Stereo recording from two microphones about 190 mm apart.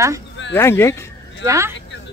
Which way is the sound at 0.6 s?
15° left (ahead or behind).